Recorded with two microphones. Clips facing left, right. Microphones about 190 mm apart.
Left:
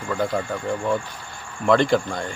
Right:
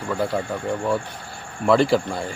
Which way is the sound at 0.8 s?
35° right (ahead or behind).